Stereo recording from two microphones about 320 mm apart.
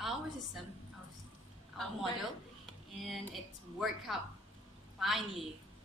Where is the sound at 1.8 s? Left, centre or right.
Centre.